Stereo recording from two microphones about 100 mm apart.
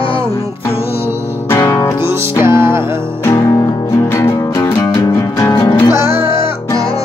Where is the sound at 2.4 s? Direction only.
25° right (ahead or behind).